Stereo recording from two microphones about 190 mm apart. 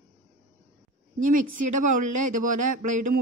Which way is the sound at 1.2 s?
45° right (ahead or behind).